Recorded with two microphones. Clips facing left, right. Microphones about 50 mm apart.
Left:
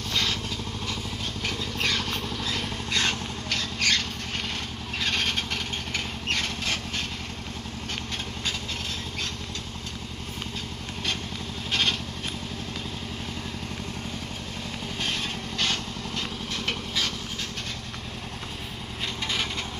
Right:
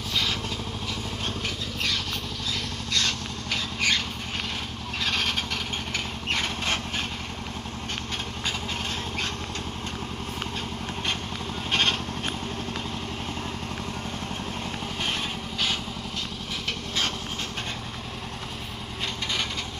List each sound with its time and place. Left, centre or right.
0.1 s vehicle: centre
2.9 s vehicle: centre
3.5 s rodents: centre
5.0 s vehicle: centre
11.7 s vehicle: centre